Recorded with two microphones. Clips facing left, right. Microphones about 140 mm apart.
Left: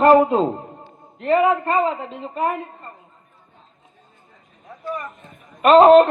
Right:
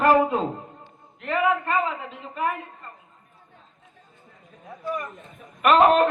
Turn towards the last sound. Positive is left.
turn(degrees=25)  # may be behind; listen again after turning